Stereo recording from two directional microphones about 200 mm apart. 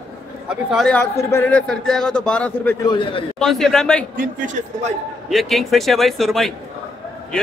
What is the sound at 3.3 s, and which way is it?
Speech, centre (ahead or behind).